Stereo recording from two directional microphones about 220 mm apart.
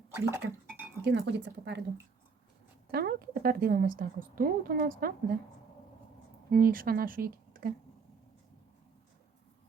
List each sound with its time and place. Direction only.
0.1 s speech: 10° right (ahead or behind)
1.0 s speech: 50° right (ahead or behind)
2.9 s a woman's voice: 45° right (ahead or behind)
6.5 s speech: 40° right (ahead or behind)